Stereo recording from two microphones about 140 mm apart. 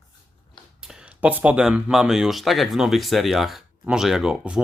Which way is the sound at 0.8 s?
5° right (ahead or behind).